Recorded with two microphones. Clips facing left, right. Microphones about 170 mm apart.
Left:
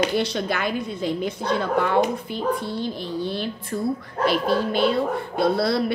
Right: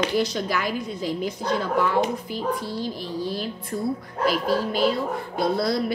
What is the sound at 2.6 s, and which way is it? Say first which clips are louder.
Speech: left 2 dB; 25° left (ahead or behind).